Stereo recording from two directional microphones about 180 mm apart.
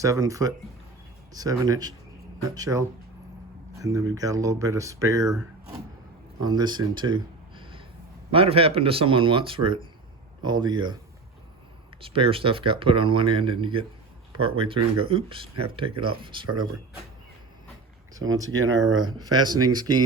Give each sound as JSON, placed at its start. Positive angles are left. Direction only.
{"t": 0.0, "sound": "speech", "side_deg": -20}
{"t": 6.4, "sound": "speech", "side_deg": -25}
{"t": 11.9, "sound": "speech", "side_deg": -30}
{"t": 18.5, "sound": "speech", "side_deg": -90}
{"t": 19.0, "sound": "speech", "side_deg": -25}